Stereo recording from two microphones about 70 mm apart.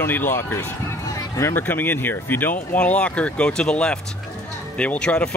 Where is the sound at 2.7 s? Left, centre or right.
Centre.